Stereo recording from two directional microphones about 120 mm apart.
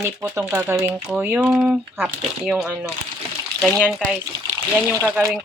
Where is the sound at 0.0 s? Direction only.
20° right (ahead or behind); by 3.8 s centre (ahead or behind).